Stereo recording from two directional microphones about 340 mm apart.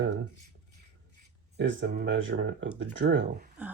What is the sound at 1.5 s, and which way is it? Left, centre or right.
Speech, right.